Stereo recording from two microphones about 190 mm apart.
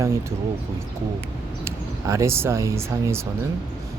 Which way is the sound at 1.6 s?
15° right (ahead or behind).